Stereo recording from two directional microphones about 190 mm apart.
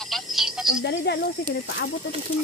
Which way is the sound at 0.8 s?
60° left (ahead or behind).